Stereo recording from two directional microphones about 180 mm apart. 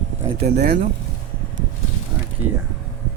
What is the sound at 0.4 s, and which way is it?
Speech, 65° right (ahead or behind).